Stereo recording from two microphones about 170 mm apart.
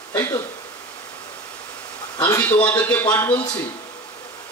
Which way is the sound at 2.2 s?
15° left (ahead or behind).